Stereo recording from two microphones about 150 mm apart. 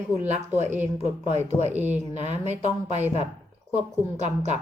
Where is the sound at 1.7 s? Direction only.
10° right (ahead or behind).